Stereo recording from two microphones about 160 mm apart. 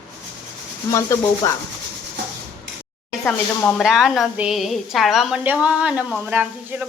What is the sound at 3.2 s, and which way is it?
A woman's voice, 10° left (ahead or behind).